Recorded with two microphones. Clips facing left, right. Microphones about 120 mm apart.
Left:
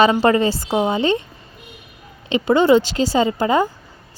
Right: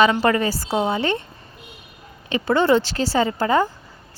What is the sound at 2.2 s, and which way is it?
Speech, 20° left (ahead or behind).